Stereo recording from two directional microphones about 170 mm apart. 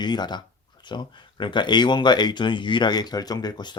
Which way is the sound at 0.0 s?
25° left (ahead or behind).